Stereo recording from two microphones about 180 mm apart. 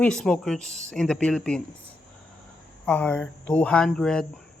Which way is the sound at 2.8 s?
5° left (ahead or behind).